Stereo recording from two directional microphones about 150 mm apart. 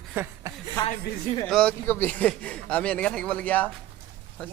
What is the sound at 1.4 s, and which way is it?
A man's voice, 5° left (ahead or behind).